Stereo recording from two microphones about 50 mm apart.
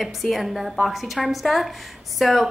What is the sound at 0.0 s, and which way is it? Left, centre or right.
A woman's voice, centre.